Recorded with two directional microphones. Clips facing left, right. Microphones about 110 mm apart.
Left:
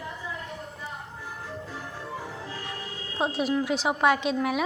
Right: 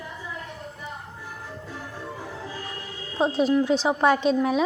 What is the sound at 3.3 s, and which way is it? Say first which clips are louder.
A woman's voice: right 6 dB; 30° right (ahead or behind).